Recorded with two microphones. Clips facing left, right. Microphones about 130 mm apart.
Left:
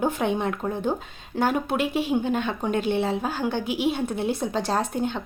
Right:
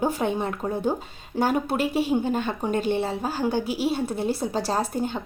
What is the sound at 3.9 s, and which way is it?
A woman's voice, 5° right (ahead or behind).